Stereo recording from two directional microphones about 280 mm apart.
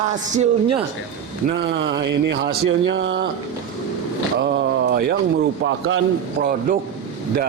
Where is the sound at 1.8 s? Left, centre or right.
Right.